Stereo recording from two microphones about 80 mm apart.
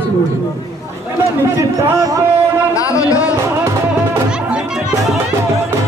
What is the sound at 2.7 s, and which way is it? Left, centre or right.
Speech, left.